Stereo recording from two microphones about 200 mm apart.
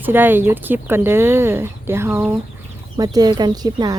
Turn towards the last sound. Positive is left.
turn(degrees=-20)  # may be behind; listen again after turning